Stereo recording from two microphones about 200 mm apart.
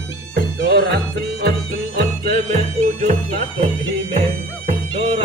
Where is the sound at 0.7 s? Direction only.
50° right (ahead or behind).